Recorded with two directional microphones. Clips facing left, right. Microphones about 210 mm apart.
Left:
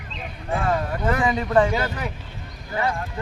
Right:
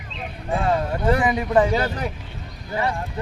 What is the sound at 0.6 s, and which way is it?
Speech, 25° right (ahead or behind).